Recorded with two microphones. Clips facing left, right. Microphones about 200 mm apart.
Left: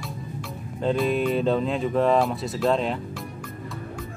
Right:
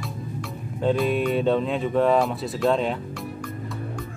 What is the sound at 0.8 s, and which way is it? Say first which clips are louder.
Speech: right 1 dB; centre (ahead or behind).